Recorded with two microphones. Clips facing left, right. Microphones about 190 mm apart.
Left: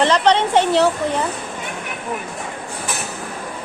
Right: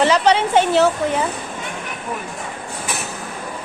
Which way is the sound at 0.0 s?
5° right (ahead or behind).